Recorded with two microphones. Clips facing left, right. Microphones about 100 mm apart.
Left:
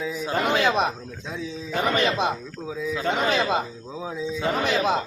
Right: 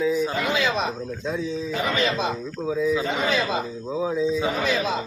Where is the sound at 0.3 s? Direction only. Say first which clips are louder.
Left 2 dB; 55° left (ahead or behind).